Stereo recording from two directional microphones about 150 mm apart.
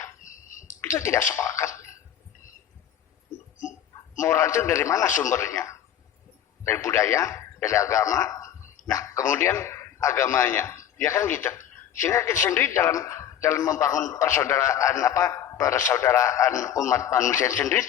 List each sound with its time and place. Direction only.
0.2 s a sound: 60° left (ahead or behind)
0.8 s speech: 20° left (ahead or behind)
4.2 s a man's voice: 15° left (ahead or behind)